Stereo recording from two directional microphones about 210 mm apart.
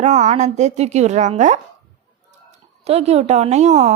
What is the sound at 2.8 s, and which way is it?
A woman's voice, 30° right (ahead or behind).